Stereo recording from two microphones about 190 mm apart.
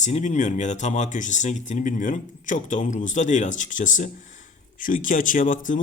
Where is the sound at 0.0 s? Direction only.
40° left (ahead or behind).